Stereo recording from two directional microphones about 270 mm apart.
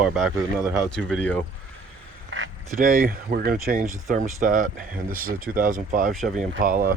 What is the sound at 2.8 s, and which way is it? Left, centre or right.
Speech, right.